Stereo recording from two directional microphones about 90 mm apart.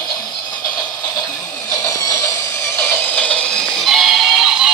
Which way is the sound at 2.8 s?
30° left (ahead or behind).